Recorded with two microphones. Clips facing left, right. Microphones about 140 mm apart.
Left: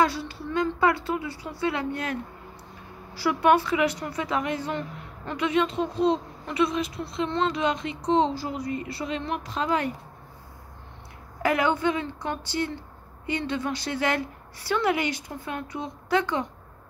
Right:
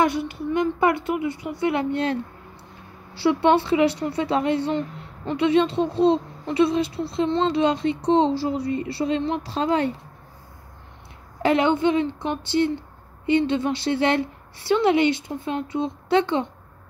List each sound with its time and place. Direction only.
0.0 s a woman's voice: 20° right (ahead or behind)
3.2 s a woman's voice: 25° right (ahead or behind)
11.4 s a woman's voice: 25° right (ahead or behind)